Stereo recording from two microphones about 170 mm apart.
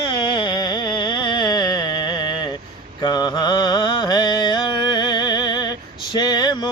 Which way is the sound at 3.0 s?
25° left (ahead or behind).